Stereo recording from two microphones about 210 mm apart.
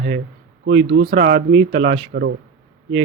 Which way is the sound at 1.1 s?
50° right (ahead or behind).